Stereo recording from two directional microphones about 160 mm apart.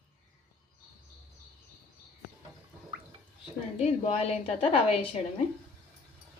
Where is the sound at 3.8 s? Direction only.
40° left (ahead or behind).